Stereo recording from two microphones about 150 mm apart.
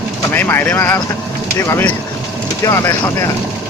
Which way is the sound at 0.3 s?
15° left (ahead or behind).